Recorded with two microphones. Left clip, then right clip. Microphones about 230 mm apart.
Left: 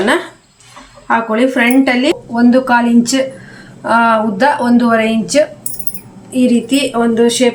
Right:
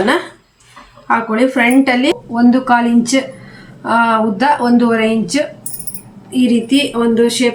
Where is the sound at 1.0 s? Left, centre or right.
Centre.